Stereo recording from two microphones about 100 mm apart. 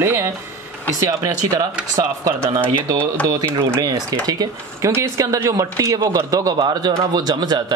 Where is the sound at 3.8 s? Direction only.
40° right (ahead or behind).